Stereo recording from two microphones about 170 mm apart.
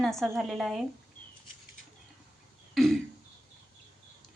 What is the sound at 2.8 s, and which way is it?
Throat clearing, centre (ahead or behind).